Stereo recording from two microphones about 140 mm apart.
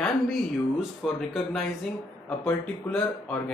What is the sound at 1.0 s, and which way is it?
Speech, centre (ahead or behind).